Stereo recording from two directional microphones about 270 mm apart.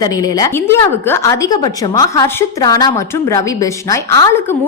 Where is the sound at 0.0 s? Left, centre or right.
Centre.